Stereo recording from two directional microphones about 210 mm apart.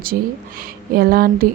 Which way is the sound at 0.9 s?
45° right (ahead or behind).